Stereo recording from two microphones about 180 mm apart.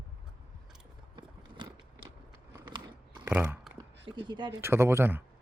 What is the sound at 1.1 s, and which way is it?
Biting, 25° right (ahead or behind).